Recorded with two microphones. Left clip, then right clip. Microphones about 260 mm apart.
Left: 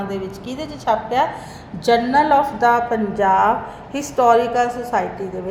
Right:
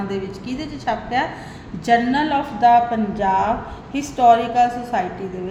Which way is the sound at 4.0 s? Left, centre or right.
Left.